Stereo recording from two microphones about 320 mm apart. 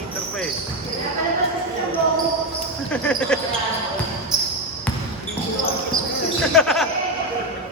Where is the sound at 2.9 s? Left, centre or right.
Centre.